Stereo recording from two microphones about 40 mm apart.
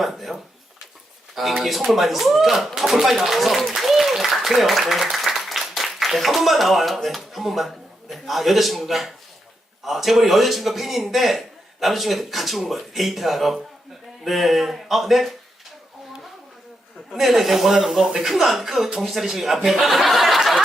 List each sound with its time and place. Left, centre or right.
0.0 s speech: centre
1.4 s speech: centre
17.1 s speech: centre
18.0 s speech: centre
18.3 s speech: centre